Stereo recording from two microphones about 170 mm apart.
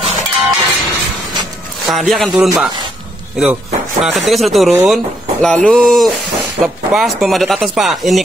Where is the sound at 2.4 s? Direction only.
5° right (ahead or behind).